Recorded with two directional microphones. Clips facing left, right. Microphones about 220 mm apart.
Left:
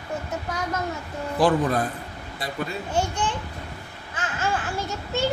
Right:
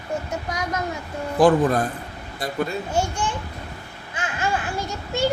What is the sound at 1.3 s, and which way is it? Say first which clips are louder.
Speech: right 4 dB; 45° right (ahead or behind).